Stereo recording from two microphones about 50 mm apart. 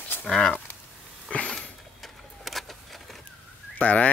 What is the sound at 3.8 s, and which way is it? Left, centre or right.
Fowl, left.